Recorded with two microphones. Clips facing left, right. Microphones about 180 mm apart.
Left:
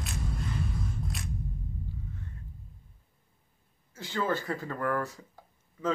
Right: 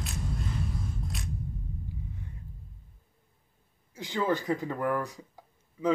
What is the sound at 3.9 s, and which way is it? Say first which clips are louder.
Speech: right 2 dB; 15° right (ahead or behind).